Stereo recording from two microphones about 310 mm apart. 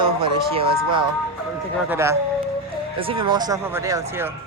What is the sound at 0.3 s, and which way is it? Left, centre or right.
Speech, centre.